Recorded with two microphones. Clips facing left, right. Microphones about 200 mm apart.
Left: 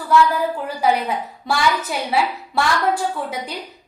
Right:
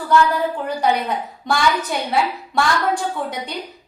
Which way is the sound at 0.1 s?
5° left (ahead or behind).